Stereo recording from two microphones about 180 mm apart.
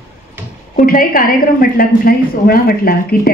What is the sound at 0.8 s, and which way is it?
A woman's voice, 50° left (ahead or behind).